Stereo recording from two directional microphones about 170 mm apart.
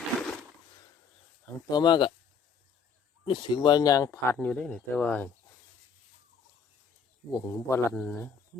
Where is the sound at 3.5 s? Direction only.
20° left (ahead or behind).